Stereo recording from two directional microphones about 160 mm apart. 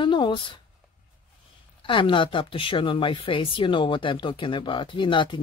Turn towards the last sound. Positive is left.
turn(degrees=30)  # may be behind; listen again after turning